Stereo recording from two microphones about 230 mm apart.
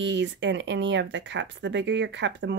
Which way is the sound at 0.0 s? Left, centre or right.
Right.